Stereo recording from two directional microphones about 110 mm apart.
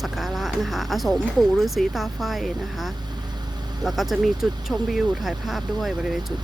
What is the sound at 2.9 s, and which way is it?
Vehicle, 40° right (ahead or behind).